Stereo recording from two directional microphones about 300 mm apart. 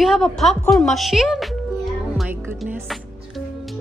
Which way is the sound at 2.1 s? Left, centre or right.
Centre.